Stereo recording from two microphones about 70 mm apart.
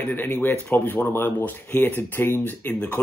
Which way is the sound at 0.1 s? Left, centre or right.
Left.